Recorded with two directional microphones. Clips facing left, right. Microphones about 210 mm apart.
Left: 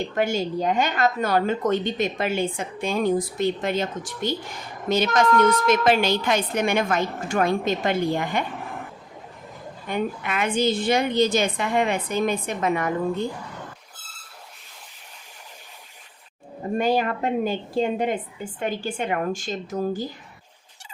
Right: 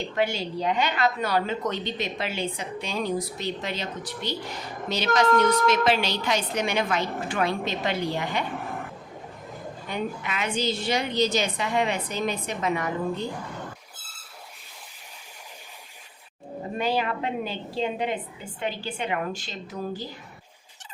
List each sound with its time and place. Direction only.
0.0 s a woman's voice: 45° left (ahead or behind)
9.9 s a woman's voice: 50° left (ahead or behind)
16.7 s a woman's voice: 45° left (ahead or behind)